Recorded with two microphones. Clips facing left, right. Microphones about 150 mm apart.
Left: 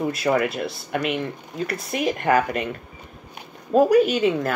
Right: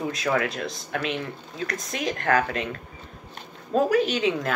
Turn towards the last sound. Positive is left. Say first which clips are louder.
# left 5 dB
turn(degrees=5)  # may be behind; listen again after turning